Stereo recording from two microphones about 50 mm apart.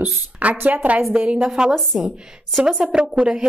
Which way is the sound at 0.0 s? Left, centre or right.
Right.